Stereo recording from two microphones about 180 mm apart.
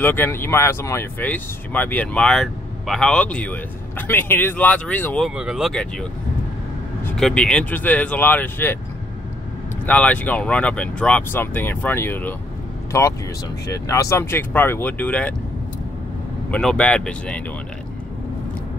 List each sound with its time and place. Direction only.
0.0 s speech: 10° left (ahead or behind)
5.3 s speech: 5° right (ahead or behind)
7.1 s speech: 5° left (ahead or behind)
9.8 s speech: 10° left (ahead or behind)
16.4 s speech: 5° left (ahead or behind)